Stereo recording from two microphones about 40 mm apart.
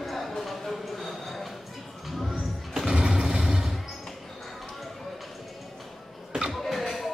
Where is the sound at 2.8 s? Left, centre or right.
Centre.